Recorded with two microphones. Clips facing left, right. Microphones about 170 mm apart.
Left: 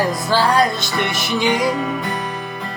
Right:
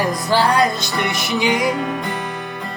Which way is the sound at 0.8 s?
25° left (ahead or behind).